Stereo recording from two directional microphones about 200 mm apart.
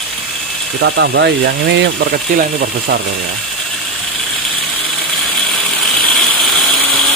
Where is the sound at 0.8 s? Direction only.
60° right (ahead or behind).